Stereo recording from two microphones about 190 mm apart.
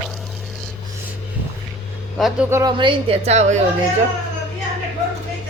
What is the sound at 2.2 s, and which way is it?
Speech, centre (ahead or behind).